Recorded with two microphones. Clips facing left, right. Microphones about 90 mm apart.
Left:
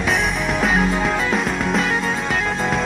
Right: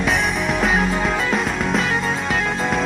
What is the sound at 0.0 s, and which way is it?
Music, centre (ahead or behind).